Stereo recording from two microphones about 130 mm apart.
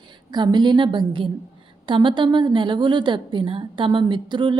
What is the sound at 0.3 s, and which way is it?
A woman's voice, 35° right (ahead or behind).